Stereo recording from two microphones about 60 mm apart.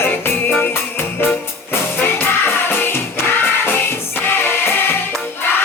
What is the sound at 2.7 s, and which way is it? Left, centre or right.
Music, left.